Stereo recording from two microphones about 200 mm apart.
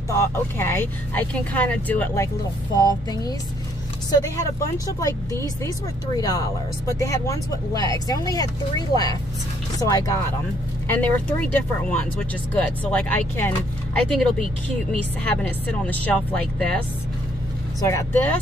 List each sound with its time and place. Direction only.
0.1 s speech: 10° left (ahead or behind)
2.9 s speech: 20° left (ahead or behind)
4.7 s speech: 15° left (ahead or behind)
17.7 s speech: 15° left (ahead or behind)